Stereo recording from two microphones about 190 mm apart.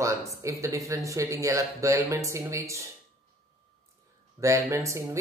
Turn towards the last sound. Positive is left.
turn(degrees=-15)  # may be behind; listen again after turning